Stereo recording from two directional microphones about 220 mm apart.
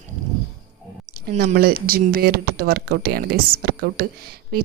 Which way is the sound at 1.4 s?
45° right (ahead or behind).